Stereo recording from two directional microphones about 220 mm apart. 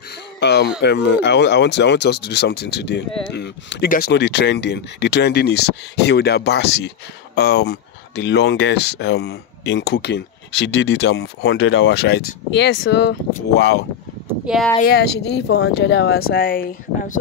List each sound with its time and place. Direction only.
0.4 s speech: 50° left (ahead or behind)
14.4 s speech: centre (ahead or behind)
14.8 s speech: 45° left (ahead or behind)